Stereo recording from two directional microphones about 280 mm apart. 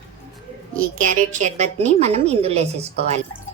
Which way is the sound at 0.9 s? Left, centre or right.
Right.